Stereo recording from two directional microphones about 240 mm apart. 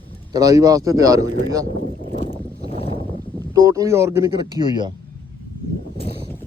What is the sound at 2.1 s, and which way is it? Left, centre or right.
Boat, left.